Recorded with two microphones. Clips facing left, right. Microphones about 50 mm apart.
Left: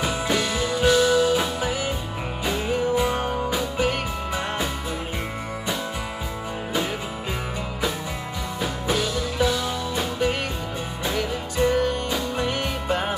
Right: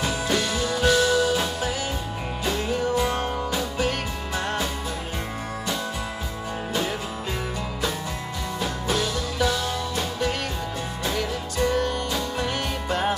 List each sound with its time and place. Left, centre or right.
0.0 s music: centre
8.5 s music: centre